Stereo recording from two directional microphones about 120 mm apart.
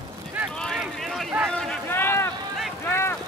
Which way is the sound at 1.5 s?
5° left (ahead or behind).